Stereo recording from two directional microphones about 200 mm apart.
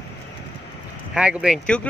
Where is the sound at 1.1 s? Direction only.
5° right (ahead or behind).